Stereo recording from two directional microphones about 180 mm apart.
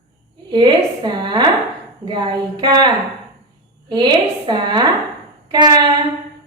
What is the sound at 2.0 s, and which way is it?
A woman's voice, 25° right (ahead or behind).